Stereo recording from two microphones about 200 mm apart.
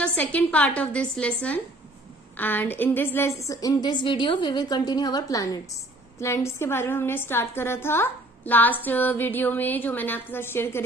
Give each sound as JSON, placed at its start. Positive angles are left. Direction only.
{"t": 0.0, "sound": "a woman's voice", "side_deg": 5}